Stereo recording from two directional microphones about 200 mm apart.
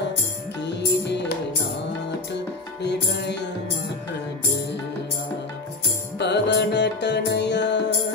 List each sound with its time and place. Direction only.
0.6 s music: 60° left (ahead or behind)
2.8 s music: 55° left (ahead or behind)
6.1 s music: 60° left (ahead or behind)